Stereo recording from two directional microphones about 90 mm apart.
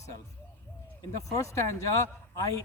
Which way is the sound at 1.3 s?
35° left (ahead or behind).